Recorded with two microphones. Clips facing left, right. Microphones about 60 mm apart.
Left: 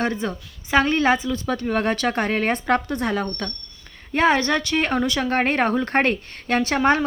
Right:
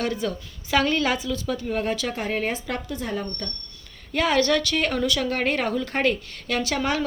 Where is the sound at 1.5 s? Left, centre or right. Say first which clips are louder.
Left 4 dB; left.